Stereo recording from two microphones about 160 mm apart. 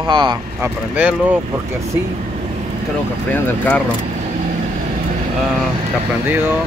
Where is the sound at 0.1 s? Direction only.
30° right (ahead or behind).